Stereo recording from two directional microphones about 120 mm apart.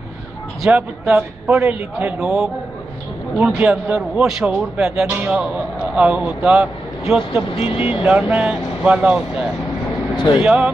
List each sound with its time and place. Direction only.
0.7 s a man's voice: 10° right (ahead or behind)
2.2 s a man's voice: 5° right (ahead or behind)
10.1 s speech: 40° left (ahead or behind)
10.4 s a man's voice: 10° right (ahead or behind)